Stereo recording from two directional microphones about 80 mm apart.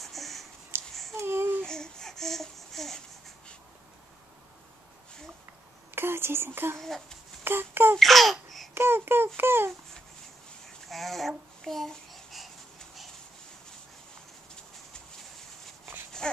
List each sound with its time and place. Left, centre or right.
0.0 s a sound: centre
0.7 s babbling: right
1.6 s a sound: centre
5.9 s a sound: right
6.8 s a child's voice: centre
7.4 s babbling: right
8.0 s speech: centre
8.7 s babbling: right
10.9 s babbling: centre